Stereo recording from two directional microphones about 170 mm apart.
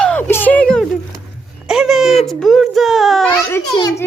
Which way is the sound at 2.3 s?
Centre (ahead or behind).